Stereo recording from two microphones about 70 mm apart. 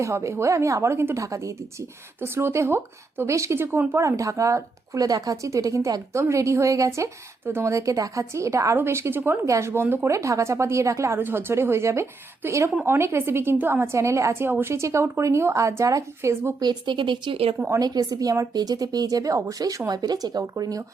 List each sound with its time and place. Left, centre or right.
0.0 s speech: right
1.2 s speech: right
2.2 s speech: right
4.0 s speech: right
8.7 s speech: right
10.1 s speech: right
11.2 s speech: right
16.6 s speech: right
17.7 s a woman's voice: right
19.9 s a woman's voice: right